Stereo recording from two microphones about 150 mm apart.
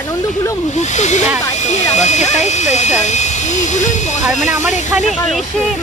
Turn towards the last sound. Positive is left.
turn(degrees=55)  # may be behind; listen again after turning